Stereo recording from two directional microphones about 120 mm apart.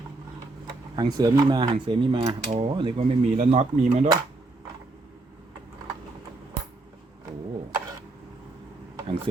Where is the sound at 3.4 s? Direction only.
70° right (ahead or behind).